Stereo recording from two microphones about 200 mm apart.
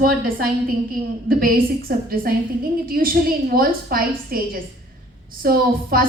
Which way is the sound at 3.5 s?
45° right (ahead or behind).